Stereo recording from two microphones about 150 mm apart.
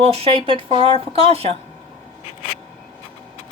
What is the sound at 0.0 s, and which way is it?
Speech, 40° right (ahead or behind).